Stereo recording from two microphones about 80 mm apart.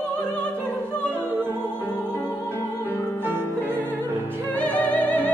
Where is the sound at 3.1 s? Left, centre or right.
Right.